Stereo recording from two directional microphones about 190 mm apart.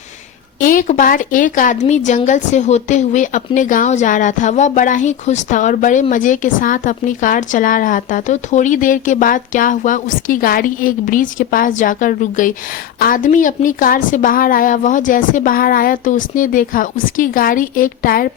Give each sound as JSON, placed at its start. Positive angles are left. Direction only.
{"t": 0.6, "sound": "a woman's voice", "side_deg": 45}